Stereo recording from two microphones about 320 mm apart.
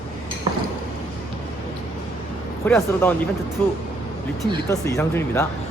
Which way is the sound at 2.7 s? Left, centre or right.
Centre.